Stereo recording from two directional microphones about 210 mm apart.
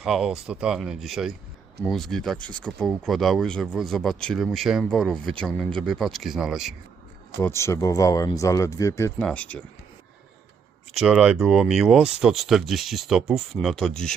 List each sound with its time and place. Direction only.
0.0 s speech: centre (ahead or behind)
7.4 s speech: 15° left (ahead or behind)
10.9 s speech: 5° right (ahead or behind)